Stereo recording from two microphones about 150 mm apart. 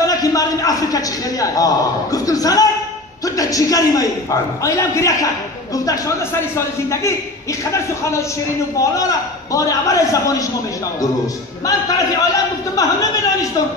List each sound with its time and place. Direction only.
0.0 s a man's voice: 25° left (ahead or behind)
12.7 s a man's voice: 20° left (ahead or behind)